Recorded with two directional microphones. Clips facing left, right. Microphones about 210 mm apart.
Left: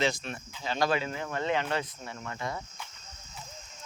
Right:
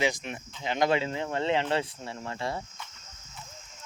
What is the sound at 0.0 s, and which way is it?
Speech, 15° right (ahead or behind).